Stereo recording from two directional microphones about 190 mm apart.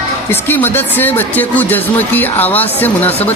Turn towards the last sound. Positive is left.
turn(degrees=10)  # may be behind; listen again after turning